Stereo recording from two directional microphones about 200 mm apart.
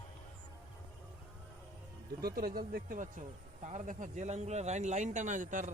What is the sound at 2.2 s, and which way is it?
A man's voice, 50° right (ahead or behind).